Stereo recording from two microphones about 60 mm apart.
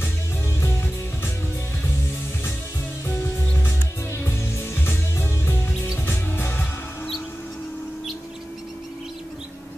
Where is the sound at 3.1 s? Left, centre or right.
Left.